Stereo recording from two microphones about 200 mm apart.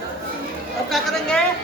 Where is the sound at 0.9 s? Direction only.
Centre (ahead or behind).